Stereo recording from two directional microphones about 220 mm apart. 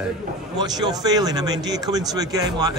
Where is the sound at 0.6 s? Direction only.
20° right (ahead or behind).